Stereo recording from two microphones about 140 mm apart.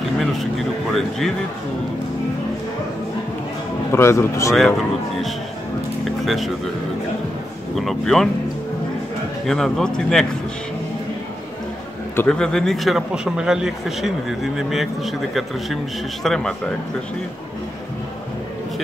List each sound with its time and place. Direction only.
0.2 s vehicle: centre (ahead or behind)
3.9 s speech: 20° left (ahead or behind)
4.6 s a man's voice: centre (ahead or behind)
6.0 s a sound: centre (ahead or behind)
7.7 s a man's voice: centre (ahead or behind)
9.5 s a man's voice: 5° left (ahead or behind)
12.2 s a man's voice: 5° left (ahead or behind)